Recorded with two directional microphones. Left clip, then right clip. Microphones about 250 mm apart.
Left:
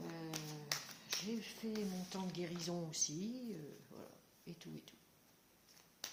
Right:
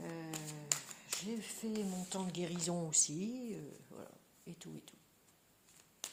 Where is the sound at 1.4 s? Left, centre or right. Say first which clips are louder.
Right 2 dB; right.